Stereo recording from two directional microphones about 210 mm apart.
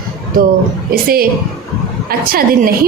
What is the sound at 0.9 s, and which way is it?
A woman's voice, 45° right (ahead or behind).